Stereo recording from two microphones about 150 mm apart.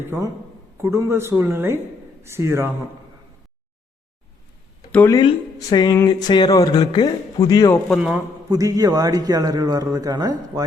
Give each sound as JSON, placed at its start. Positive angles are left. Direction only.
{"t": 0.0, "sound": "speech", "side_deg": -15}
{"t": 4.9, "sound": "speech", "side_deg": 10}
{"t": 5.1, "sound": "speech", "side_deg": 25}
{"t": 7.9, "sound": "a man's voice", "side_deg": 0}
{"t": 8.4, "sound": "a man's voice", "side_deg": -25}